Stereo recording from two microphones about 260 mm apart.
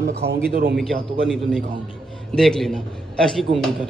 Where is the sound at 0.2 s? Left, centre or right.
Right.